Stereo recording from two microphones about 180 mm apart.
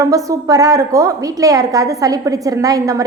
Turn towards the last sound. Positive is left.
turn(degrees=-20)  # may be behind; listen again after turning